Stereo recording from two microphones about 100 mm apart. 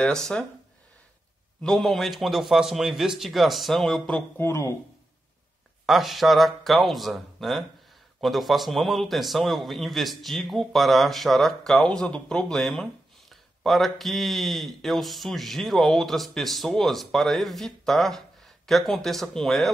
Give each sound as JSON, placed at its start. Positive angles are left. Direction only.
{"t": 0.0, "sound": "speech", "side_deg": 10}
{"t": 1.6, "sound": "speech", "side_deg": 5}
{"t": 4.4, "sound": "a man's voice", "side_deg": 30}
{"t": 5.9, "sound": "speech", "side_deg": 0}